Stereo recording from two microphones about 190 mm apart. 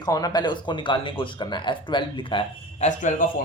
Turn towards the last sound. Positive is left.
turn(degrees=40)  # may be behind; listen again after turning